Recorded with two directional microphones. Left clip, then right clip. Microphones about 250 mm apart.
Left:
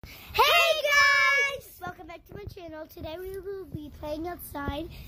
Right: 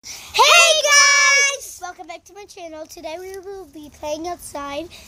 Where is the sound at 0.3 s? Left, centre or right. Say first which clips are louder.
Right 8 dB; centre.